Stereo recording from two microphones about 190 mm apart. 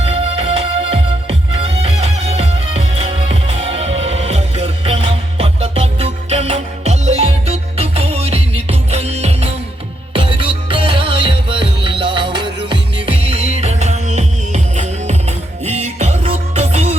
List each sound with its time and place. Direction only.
0.0 s music: 30° right (ahead or behind)